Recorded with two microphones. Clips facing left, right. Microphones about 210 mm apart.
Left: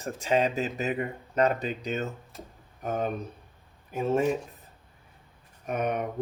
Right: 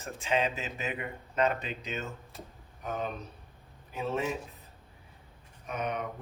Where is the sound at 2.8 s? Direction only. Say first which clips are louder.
Left 6 dB; 45° left (ahead or behind).